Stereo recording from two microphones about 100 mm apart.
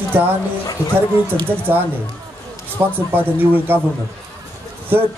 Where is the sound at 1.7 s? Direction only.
20° right (ahead or behind).